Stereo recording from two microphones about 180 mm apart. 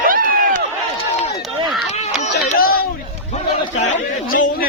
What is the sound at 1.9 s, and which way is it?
Run, 40° left (ahead or behind).